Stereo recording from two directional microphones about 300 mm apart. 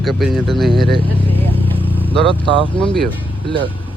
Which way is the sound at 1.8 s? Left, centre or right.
Centre.